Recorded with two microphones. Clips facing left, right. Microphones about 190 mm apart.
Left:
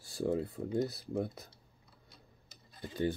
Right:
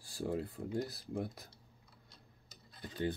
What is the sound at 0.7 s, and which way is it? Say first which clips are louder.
Speech: left 5 dB; 20° left (ahead or behind).